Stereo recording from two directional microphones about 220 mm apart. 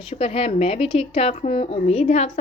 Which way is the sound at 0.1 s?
25° left (ahead or behind).